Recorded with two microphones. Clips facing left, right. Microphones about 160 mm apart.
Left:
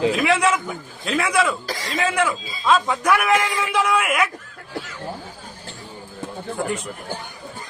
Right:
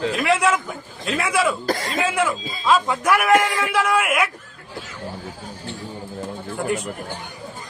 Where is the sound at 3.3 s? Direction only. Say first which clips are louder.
Right 3 dB; 55° right (ahead or behind).